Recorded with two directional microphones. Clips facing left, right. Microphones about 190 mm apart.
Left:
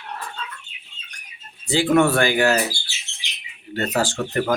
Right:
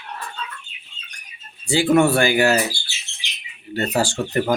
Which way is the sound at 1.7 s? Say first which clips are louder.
Right 1 dB; 10° right (ahead or behind).